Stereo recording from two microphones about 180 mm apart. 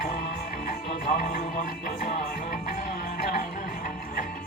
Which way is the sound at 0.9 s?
60° left (ahead or behind).